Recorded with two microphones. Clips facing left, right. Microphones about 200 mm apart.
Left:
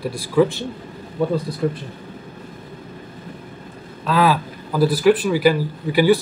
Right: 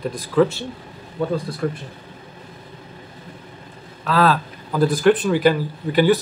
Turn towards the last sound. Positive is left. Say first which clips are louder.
# left 1 dB
turn(degrees=10)  # may be behind; listen again after turning